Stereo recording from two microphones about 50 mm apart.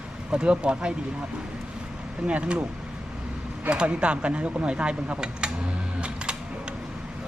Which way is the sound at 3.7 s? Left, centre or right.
Right.